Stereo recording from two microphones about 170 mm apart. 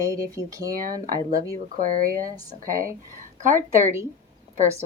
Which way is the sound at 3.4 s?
50° right (ahead or behind).